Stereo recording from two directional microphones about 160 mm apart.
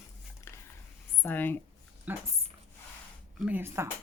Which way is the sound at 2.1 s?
10° right (ahead or behind).